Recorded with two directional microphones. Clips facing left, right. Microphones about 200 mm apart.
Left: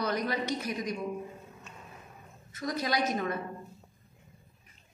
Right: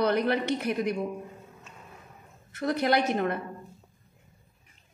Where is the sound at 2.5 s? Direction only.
60° right (ahead or behind).